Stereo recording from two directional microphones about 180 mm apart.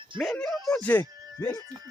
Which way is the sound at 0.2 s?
Centre (ahead or behind).